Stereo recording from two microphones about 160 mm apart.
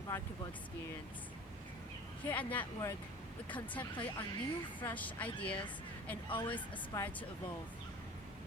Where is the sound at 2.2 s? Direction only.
10° left (ahead or behind).